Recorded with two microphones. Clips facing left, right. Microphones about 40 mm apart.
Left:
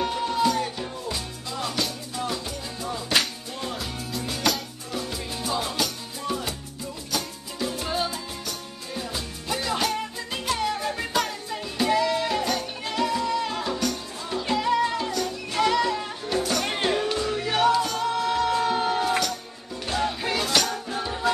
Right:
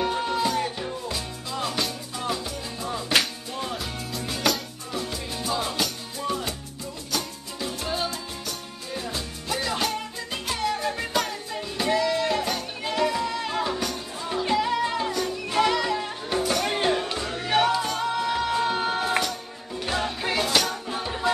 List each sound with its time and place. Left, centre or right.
0.1 s music: centre
2.2 s salsa music: centre
3.2 s music: centre
14.5 s music: centre
17.6 s music: centre